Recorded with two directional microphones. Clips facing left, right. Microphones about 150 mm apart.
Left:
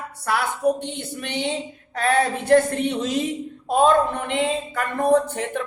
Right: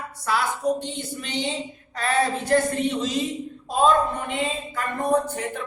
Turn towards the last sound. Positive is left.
turn(degrees=65)  # may be behind; listen again after turning